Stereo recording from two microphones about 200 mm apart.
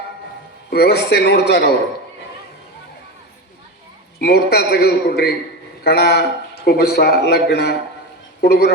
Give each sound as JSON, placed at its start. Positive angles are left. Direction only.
{"t": 0.7, "sound": "a man's voice", "side_deg": 55}
{"t": 4.2, "sound": "a man's voice", "side_deg": 55}